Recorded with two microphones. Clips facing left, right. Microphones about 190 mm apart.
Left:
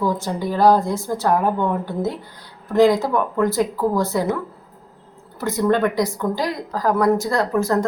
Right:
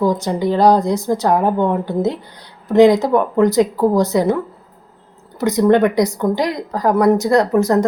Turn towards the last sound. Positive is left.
turn(degrees=-20)  # may be behind; listen again after turning